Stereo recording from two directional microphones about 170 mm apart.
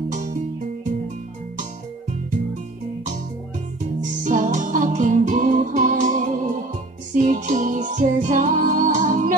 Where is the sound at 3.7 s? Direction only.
45° right (ahead or behind).